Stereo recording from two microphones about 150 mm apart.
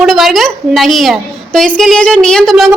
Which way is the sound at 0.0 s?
Centre (ahead or behind).